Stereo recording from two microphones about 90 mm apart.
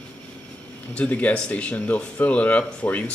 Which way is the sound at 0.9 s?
15° left (ahead or behind).